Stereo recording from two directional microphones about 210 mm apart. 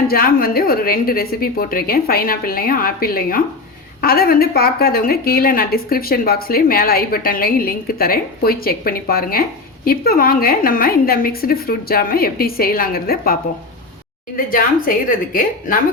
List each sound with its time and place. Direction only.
0.1 s a woman's voice: 45° left (ahead or behind)
14.3 s a woman's voice: 40° left (ahead or behind)